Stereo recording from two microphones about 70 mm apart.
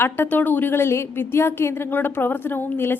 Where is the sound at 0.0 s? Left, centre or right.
Left.